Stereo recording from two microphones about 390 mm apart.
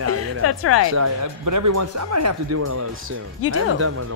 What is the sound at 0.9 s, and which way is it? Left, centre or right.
Speech, right.